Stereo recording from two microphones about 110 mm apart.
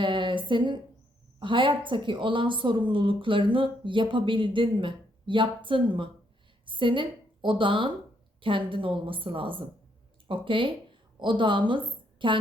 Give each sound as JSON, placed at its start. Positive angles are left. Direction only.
{"t": 0.0, "sound": "a woman's voice", "side_deg": -50}